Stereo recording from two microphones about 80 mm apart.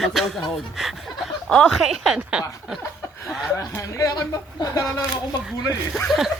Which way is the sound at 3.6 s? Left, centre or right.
Left.